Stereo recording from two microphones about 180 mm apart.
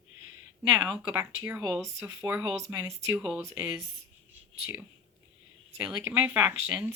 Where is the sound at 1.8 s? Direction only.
15° right (ahead or behind).